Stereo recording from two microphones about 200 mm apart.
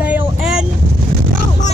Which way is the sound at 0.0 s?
5° right (ahead or behind).